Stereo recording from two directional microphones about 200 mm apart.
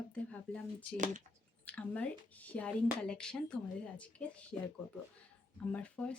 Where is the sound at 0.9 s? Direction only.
40° right (ahead or behind).